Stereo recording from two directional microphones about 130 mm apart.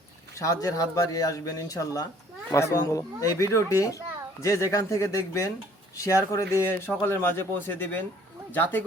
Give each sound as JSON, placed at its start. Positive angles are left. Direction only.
{"t": 0.3, "sound": "a man's voice", "side_deg": 25}